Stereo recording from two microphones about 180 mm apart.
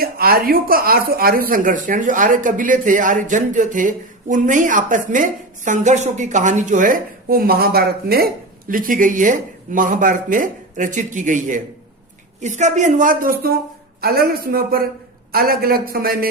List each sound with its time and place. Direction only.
0.0 s a man's voice: 55° right (ahead or behind)